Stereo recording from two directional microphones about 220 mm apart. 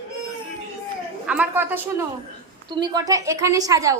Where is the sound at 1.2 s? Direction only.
5° right (ahead or behind).